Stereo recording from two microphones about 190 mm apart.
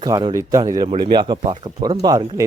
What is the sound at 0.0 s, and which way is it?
Speech, 20° right (ahead or behind).